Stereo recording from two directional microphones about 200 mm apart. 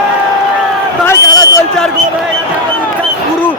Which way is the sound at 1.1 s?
15° left (ahead or behind).